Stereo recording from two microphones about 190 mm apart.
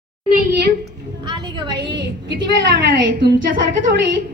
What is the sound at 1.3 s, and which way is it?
Speech, 25° right (ahead or behind).